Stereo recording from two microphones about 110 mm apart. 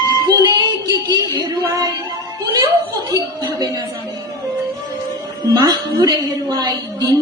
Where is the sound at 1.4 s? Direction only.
40° right (ahead or behind).